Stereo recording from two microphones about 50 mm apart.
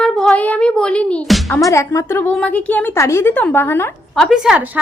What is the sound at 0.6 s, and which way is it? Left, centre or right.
Speech, centre.